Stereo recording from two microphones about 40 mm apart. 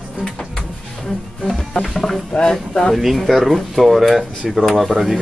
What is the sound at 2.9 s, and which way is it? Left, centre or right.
Speech, centre.